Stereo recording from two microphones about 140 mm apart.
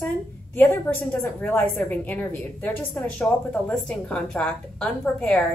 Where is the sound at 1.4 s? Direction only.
15° left (ahead or behind).